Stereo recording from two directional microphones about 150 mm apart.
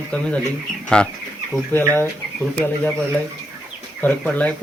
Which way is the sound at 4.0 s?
10° left (ahead or behind).